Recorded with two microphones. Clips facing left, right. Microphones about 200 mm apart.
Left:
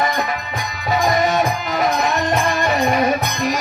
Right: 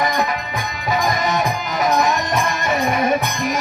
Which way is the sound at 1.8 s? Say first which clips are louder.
Right 2 dB; 40° right (ahead or behind).